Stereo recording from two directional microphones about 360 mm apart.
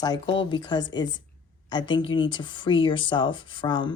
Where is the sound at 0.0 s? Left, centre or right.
Centre.